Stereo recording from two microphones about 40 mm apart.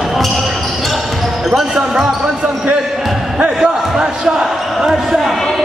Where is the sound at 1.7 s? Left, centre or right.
Centre.